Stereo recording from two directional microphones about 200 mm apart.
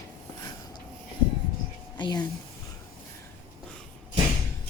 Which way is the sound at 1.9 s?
20° left (ahead or behind).